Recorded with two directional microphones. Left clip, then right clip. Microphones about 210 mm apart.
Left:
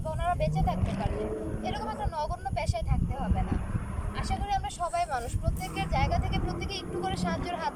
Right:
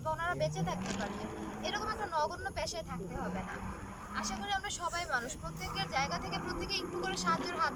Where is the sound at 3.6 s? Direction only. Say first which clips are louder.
Left 4 dB; 40° left (ahead or behind).